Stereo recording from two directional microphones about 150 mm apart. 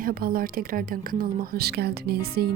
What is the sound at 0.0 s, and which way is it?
A woman's voice, 80° right.